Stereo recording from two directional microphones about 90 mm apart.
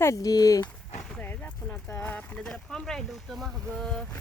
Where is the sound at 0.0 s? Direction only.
40° left (ahead or behind).